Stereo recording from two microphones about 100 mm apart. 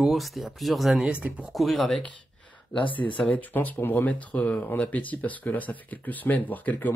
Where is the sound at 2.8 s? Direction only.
55° left (ahead or behind).